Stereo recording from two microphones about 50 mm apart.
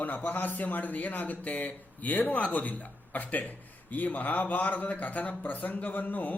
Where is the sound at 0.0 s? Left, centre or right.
Left.